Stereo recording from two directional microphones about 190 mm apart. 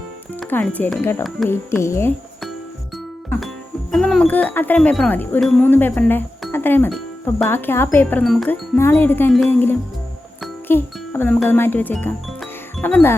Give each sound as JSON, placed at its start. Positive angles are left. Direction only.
{"t": 0.3, "sound": "speech", "side_deg": 5}
{"t": 3.9, "sound": "speech", "side_deg": 0}